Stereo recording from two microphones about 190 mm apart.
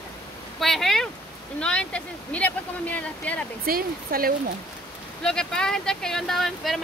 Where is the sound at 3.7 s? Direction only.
50° right (ahead or behind).